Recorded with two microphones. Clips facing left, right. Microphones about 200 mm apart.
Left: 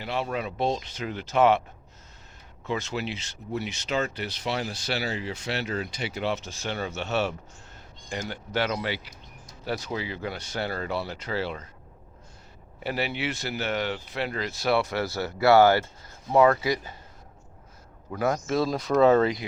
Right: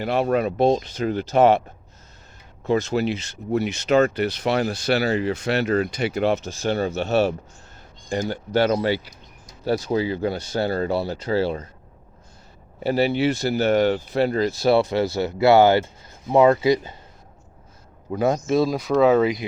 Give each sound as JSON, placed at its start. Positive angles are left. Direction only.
{"t": 0.0, "sound": "speech", "side_deg": -50}
{"t": 2.6, "sound": "speech", "side_deg": -40}
{"t": 12.8, "sound": "speech", "side_deg": -35}
{"t": 18.1, "sound": "speech", "side_deg": -20}
{"t": 18.7, "sound": "speech", "side_deg": -5}